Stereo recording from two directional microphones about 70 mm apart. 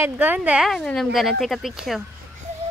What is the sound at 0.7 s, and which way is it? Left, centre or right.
Speech, centre.